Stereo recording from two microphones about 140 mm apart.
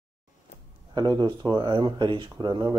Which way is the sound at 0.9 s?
30° right (ahead or behind).